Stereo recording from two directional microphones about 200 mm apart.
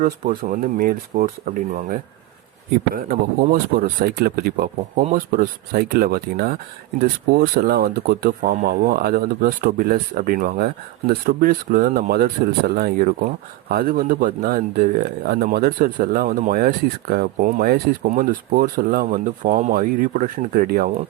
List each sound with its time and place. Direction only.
0.0 s speech: 40° right (ahead or behind)